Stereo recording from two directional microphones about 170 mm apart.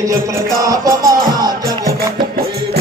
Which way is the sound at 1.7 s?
60° right (ahead or behind).